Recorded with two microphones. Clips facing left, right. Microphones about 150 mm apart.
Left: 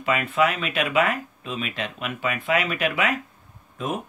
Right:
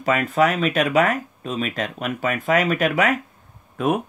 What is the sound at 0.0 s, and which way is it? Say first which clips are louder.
Speech: right 3 dB; 40° right (ahead or behind).